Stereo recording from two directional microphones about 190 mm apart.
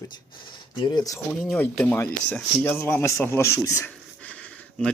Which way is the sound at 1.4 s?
Centre (ahead or behind).